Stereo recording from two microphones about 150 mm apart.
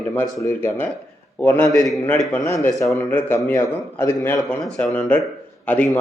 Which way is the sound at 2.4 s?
20° left (ahead or behind).